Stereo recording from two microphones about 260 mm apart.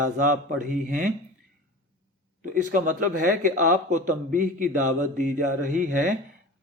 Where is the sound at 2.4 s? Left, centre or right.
Right.